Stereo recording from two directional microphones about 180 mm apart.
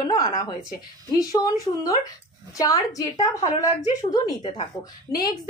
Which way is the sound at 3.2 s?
35° left (ahead or behind).